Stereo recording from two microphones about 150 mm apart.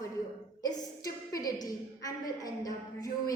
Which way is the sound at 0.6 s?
25° left (ahead or behind).